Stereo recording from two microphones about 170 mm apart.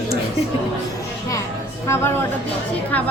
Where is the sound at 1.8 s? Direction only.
15° left (ahead or behind).